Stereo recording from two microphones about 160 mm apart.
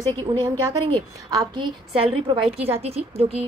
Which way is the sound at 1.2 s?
25° right (ahead or behind).